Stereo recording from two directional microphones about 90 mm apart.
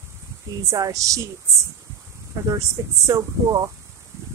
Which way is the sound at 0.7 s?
40° right (ahead or behind).